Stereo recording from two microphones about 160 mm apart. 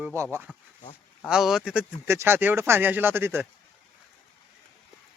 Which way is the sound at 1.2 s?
5° right (ahead or behind).